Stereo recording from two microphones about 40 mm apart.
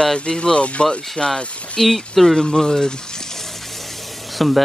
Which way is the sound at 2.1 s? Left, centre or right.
Centre.